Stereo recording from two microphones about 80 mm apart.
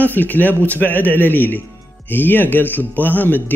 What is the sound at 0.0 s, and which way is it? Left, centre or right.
Speech, left.